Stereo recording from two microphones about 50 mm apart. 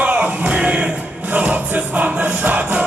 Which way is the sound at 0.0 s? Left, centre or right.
Right.